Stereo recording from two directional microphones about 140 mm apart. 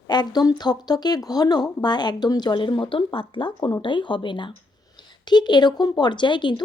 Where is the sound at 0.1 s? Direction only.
30° left (ahead or behind).